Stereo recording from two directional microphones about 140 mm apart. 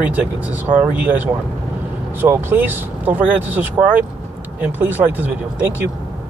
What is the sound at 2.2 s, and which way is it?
Speech, 15° right (ahead or behind).